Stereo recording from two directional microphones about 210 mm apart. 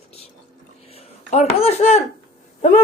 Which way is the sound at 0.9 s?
30° left (ahead or behind).